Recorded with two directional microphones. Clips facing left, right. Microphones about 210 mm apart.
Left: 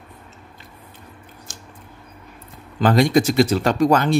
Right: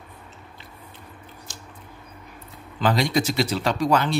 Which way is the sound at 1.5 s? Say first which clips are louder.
Left 1 dB; 50° left (ahead or behind).